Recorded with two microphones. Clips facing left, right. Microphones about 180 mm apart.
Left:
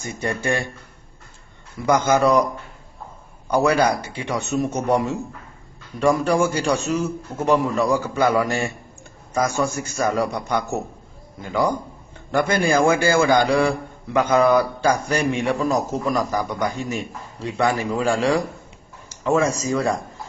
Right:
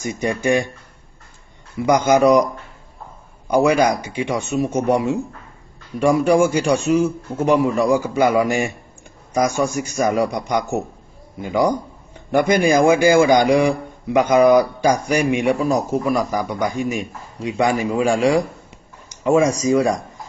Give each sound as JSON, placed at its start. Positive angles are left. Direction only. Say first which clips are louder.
{"t": 0.0, "sound": "a man's voice", "louder": "right 4 dB", "side_deg": -15}
{"t": 1.9, "sound": "a man's voice", "louder": "right 3 dB", "side_deg": -15}
{"t": 3.4, "sound": "a man's voice", "louder": "right 3 dB", "side_deg": -10}